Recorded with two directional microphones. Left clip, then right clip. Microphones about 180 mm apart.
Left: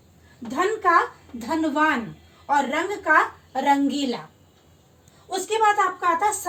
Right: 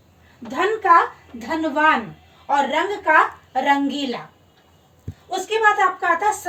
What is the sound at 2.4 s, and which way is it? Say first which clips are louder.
A woman's voice: right 3 dB; 5° left (ahead or behind).